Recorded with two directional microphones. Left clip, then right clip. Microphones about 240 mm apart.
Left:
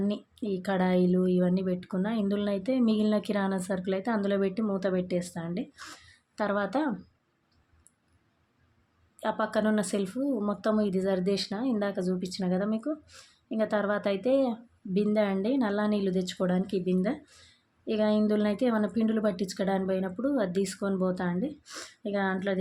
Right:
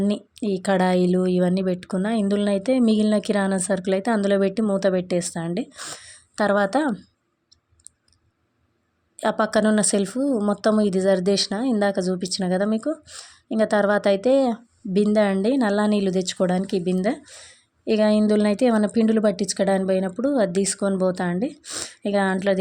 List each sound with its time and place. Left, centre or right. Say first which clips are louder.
0.0 s speech: right 8 dB; right
9.1 s speech: right 8 dB; right